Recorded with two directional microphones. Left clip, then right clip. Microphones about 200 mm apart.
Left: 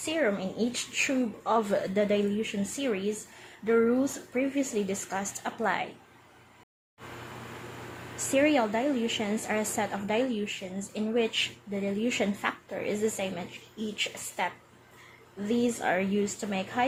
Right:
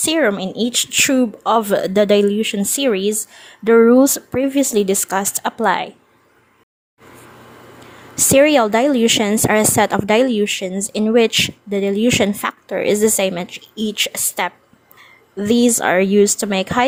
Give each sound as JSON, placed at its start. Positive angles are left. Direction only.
{"t": 0.0, "sound": "a woman's voice", "side_deg": -45}
{"t": 8.1, "sound": "a woman's voice", "side_deg": -45}